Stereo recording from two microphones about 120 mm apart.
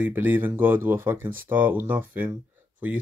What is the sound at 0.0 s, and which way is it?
Speech, 15° right (ahead or behind).